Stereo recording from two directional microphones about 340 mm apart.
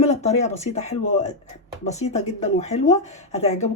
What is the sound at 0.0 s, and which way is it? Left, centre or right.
Speech, centre.